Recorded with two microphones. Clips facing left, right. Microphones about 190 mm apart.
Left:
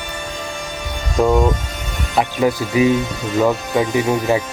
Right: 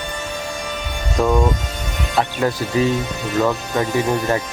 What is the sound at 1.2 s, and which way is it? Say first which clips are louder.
Speech: left 2 dB; 15° left (ahead or behind).